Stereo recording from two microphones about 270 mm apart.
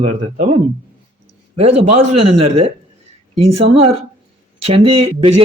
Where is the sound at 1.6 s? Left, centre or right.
Right.